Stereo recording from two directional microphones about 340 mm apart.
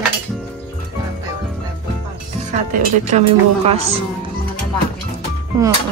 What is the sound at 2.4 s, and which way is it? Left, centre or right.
A woman's voice, right.